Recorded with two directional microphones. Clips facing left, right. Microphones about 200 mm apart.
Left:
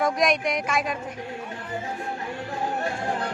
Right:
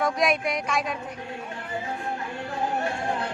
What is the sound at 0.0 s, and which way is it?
Speech, centre (ahead or behind).